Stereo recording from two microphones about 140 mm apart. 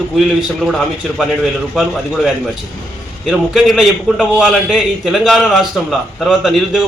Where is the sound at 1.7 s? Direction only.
Centre (ahead or behind).